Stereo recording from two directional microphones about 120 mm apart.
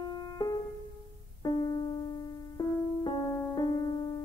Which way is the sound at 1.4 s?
35° left (ahead or behind).